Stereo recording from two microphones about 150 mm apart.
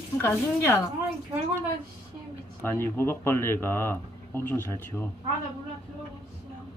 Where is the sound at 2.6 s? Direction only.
15° left (ahead or behind).